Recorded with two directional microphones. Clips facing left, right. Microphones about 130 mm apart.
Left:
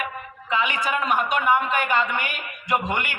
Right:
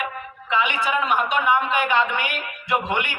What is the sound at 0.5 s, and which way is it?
A man's voice, 40° left (ahead or behind).